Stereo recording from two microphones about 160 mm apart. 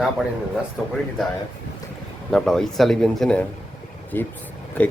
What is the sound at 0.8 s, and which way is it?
Speech, centre (ahead or behind).